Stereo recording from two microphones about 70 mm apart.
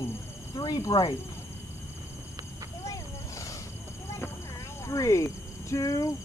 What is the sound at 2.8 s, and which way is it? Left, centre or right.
Vehicle, left.